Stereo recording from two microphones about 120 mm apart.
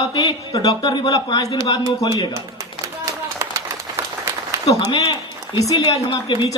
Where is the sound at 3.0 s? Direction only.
25° right (ahead or behind).